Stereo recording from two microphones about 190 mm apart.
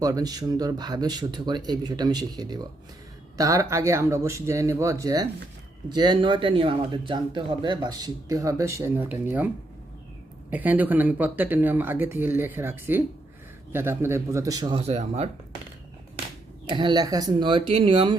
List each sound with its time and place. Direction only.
0.0 s speech: 20° right (ahead or behind)
10.5 s speech: 10° right (ahead or behind); by 15.3 s 35° right (ahead or behind)
16.6 s speech: 25° right (ahead or behind)